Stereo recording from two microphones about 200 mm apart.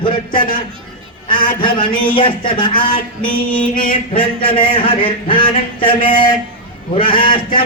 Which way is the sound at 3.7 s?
45° left (ahead or behind).